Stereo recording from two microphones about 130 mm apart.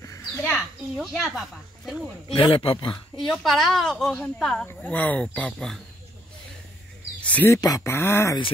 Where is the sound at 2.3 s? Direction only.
45° left (ahead or behind).